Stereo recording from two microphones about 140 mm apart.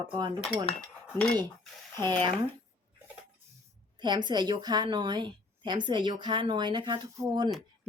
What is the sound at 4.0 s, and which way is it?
Speech, 30° right (ahead or behind).